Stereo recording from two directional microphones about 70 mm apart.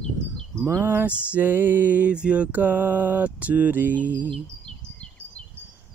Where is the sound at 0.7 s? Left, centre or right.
Right.